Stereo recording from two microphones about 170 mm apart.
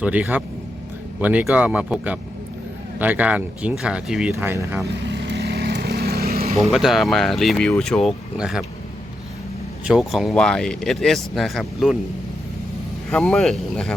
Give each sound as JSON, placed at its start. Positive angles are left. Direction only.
{"t": 0.0, "sound": "speech", "side_deg": -10}
{"t": 5.0, "sound": "vehicle", "side_deg": -90}
{"t": 6.6, "sound": "speech", "side_deg": 0}
{"t": 9.8, "sound": "speech", "side_deg": 0}
{"t": 13.1, "sound": "speech", "side_deg": 5}